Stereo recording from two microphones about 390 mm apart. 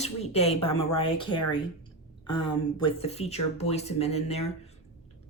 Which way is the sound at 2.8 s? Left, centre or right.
Centre.